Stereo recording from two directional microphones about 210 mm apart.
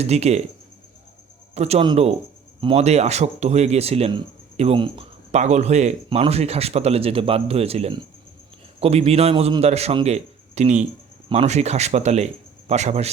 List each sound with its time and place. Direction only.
0.0 s speech: 30° right (ahead or behind)
1.5 s a man's voice: 30° right (ahead or behind)